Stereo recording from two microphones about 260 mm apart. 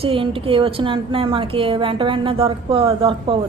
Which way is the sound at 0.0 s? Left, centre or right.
Right.